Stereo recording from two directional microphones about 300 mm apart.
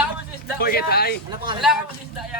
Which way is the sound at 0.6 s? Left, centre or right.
Left.